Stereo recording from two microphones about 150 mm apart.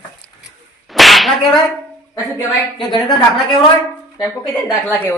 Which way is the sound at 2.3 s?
30° left (ahead or behind).